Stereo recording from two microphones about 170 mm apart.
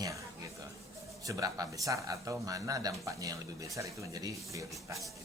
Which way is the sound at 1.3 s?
20° right (ahead or behind).